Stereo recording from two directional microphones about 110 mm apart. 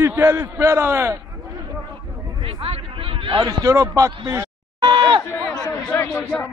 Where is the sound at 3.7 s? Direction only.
30° right (ahead or behind).